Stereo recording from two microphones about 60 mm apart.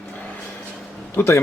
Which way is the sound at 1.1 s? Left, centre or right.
Left.